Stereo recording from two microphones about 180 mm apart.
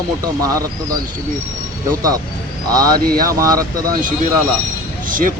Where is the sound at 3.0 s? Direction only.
55° right (ahead or behind).